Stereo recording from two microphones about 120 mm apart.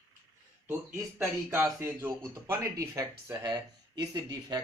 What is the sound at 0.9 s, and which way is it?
Speech, 20° right (ahead or behind).